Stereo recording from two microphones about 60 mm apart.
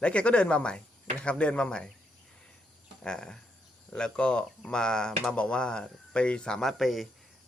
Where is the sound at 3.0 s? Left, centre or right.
Centre.